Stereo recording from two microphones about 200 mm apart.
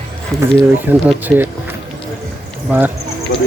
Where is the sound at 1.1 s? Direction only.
10° right (ahead or behind).